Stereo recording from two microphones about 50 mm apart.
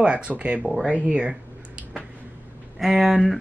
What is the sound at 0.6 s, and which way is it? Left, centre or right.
Speech, centre.